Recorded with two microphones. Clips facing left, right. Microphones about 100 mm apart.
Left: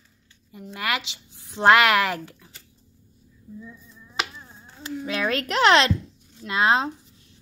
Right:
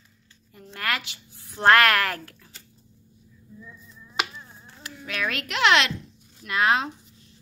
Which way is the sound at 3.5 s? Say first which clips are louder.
Left 3 dB; 15° left (ahead or behind).